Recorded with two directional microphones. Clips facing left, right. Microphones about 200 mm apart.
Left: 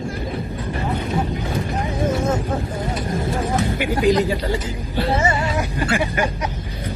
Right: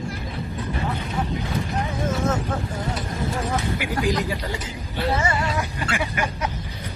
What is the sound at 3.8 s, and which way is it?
Speech, 25° left (ahead or behind).